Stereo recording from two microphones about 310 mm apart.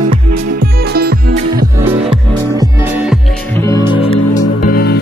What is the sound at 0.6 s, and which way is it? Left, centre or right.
Music, right.